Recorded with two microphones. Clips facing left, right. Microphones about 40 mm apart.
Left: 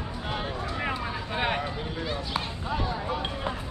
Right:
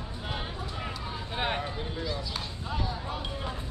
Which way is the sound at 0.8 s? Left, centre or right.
Left.